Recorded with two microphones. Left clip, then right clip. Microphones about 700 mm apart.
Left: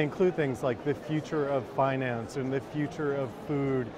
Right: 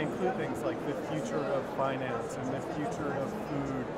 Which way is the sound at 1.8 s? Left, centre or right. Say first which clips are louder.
Left 7 dB; left.